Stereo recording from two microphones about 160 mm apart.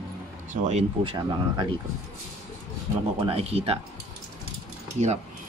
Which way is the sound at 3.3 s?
40° right (ahead or behind).